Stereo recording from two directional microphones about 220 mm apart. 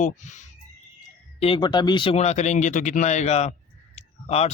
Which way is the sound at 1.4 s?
20° left (ahead or behind).